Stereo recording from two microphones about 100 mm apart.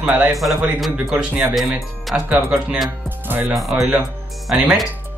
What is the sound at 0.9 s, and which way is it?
Speech, 15° right (ahead or behind).